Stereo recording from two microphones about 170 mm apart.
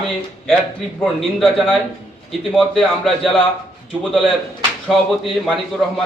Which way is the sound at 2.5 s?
Centre (ahead or behind).